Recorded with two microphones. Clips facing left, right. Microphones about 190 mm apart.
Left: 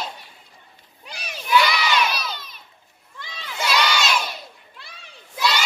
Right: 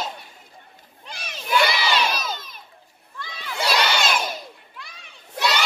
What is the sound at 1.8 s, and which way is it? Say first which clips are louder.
Crowd: left 1 dB; 30° right (ahead or behind).